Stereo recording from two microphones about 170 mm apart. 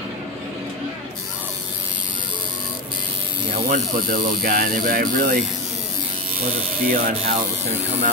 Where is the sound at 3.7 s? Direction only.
55° right (ahead or behind).